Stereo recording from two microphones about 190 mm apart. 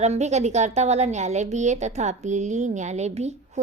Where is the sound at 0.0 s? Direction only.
35° right (ahead or behind).